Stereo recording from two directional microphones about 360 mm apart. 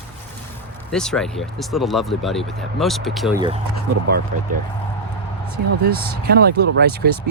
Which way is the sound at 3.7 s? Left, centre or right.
Right.